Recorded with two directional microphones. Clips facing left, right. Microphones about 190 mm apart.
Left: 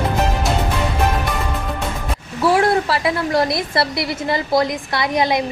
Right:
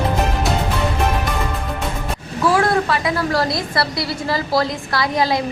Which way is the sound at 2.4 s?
25° left (ahead or behind).